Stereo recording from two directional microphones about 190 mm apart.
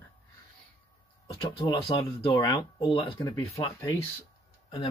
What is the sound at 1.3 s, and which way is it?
Speech, 25° left (ahead or behind).